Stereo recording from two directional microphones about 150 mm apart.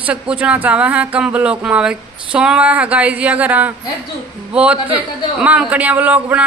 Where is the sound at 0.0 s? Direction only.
10° right (ahead or behind).